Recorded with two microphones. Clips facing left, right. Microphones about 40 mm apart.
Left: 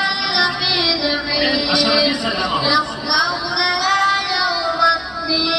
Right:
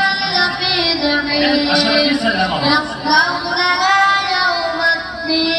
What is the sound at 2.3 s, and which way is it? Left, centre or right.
Female singing, centre.